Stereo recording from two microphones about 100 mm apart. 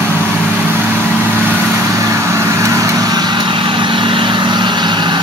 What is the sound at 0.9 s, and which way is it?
Vehicle, 10° left (ahead or behind).